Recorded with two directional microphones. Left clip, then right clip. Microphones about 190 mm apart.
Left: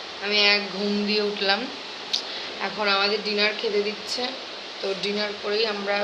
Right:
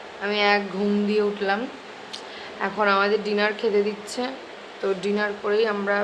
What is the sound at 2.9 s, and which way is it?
Speech, 45° right (ahead or behind).